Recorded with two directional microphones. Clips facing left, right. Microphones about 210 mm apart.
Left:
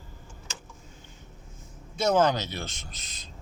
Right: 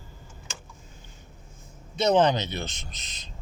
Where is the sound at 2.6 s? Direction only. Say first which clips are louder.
Right 2 dB; 25° right (ahead or behind).